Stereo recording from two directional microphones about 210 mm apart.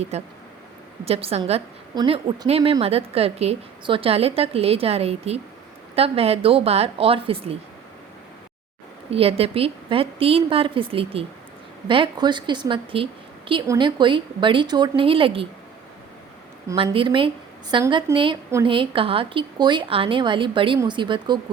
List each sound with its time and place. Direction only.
0.1 s a woman's voice: 30° right (ahead or behind)
9.0 s a woman's voice: 25° right (ahead or behind)
16.6 s a woman's voice: 25° right (ahead or behind)